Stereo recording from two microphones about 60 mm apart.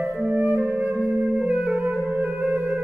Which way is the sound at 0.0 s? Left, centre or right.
Right.